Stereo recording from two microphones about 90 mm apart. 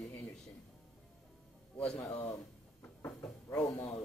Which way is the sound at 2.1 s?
35° left (ahead or behind).